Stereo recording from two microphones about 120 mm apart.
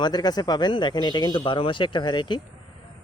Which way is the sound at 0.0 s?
35° left (ahead or behind).